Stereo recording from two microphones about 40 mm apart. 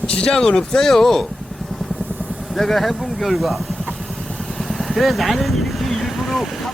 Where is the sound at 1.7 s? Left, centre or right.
Centre.